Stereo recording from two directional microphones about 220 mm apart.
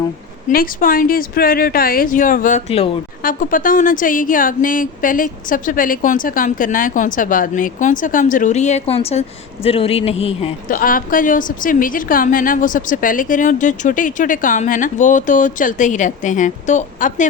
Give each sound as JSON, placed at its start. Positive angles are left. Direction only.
{"t": 0.4, "sound": "a woman's voice", "side_deg": 40}
{"t": 3.2, "sound": "a woman's voice", "side_deg": 40}
{"t": 10.8, "sound": "a woman's voice", "side_deg": 40}